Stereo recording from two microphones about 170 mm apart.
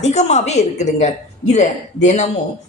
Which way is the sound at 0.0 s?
40° left (ahead or behind).